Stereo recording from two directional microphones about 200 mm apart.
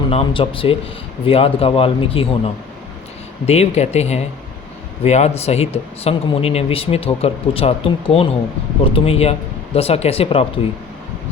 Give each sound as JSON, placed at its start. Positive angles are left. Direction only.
{"t": 0.1, "sound": "speech", "side_deg": 25}